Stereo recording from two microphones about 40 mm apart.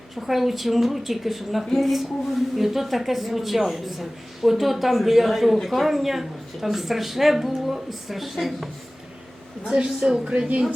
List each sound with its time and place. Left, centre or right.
0.2 s speech: centre
9.6 s speech: right